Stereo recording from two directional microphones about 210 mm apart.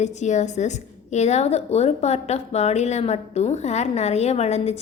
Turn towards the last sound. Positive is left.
turn(degrees=30)  # may be behind; listen again after turning